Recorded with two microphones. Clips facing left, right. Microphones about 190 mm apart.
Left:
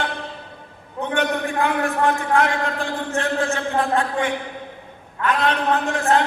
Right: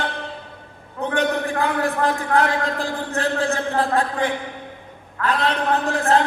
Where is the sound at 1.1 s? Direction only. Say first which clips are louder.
Even; 35° right (ahead or behind).